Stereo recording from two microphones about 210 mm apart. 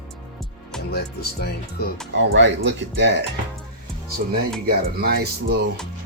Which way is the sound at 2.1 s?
60° right (ahead or behind).